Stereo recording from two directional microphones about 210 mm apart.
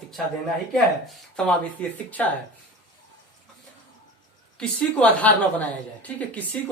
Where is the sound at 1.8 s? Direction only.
5° left (ahead or behind).